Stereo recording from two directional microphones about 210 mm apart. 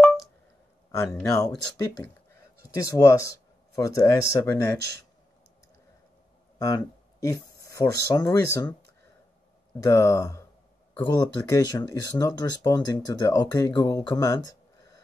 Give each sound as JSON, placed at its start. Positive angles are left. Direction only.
{"t": 0.9, "sound": "speech", "side_deg": 15}
{"t": 2.7, "sound": "speech", "side_deg": 15}
{"t": 6.6, "sound": "speech", "side_deg": 15}
{"t": 9.8, "sound": "speech", "side_deg": 15}